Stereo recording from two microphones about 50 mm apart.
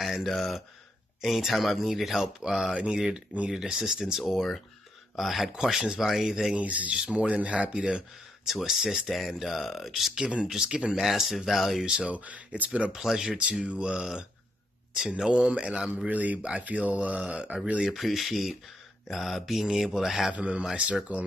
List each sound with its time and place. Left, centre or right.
0.0 s a sound: centre
1.2 s speech: centre
4.2 s speech: centre
6.5 s speech: right
6.9 s speech: centre
8.5 s speech: centre
10.1 s speech: centre
11.0 s speech: centre
12.1 s speech: right
12.9 s speech: centre
13.4 s speech: right
16.1 s speech: right
17.8 s speech: centre
20.3 s speech: right